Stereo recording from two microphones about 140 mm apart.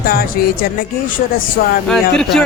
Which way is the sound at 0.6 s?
90° left.